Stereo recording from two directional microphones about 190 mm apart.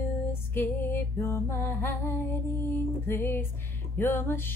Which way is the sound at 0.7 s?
15° left (ahead or behind).